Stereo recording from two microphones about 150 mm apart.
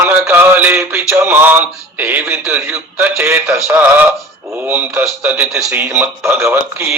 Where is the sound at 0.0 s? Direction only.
15° right (ahead or behind).